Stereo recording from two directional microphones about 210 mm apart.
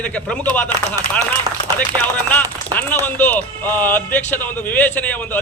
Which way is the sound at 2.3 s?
10° left (ahead or behind).